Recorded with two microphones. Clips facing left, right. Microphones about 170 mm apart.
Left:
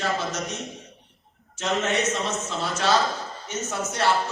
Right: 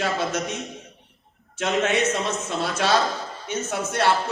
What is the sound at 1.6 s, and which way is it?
A man's voice, 60° right (ahead or behind).